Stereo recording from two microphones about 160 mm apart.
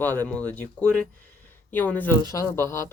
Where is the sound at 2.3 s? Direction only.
20° left (ahead or behind).